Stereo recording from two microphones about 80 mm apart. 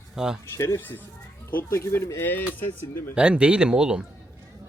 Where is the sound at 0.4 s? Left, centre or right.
Left.